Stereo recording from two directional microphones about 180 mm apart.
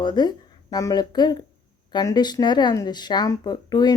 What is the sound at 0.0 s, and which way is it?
Speech, 25° left (ahead or behind).